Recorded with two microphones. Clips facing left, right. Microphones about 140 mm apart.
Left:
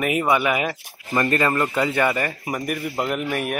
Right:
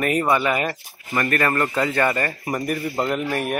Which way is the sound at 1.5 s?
10° left (ahead or behind).